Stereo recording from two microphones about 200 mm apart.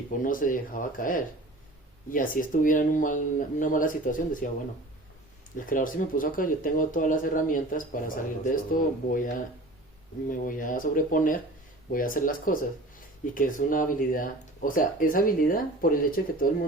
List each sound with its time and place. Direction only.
0.2 s speech: 45° left (ahead or behind)
5.5 s speech: 40° left (ahead or behind)